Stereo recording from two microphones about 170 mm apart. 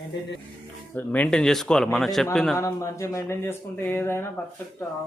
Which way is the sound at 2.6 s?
15° left (ahead or behind).